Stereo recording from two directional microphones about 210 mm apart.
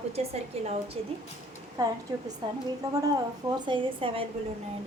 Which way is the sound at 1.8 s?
20° right (ahead or behind).